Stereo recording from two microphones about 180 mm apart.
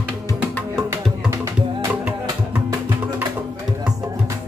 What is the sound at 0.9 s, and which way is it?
Music, 15° right (ahead or behind).